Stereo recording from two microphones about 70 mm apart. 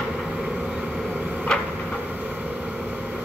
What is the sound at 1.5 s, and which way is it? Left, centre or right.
Vehicle, centre.